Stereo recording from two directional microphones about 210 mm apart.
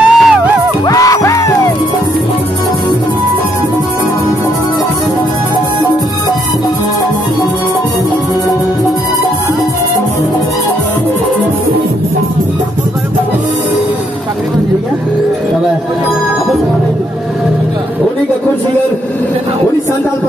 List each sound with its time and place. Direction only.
0.0 s music: centre (ahead or behind)
0.8 s music: 15° left (ahead or behind)